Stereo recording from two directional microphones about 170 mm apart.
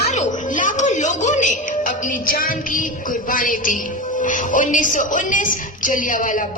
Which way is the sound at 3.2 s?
55° left (ahead or behind).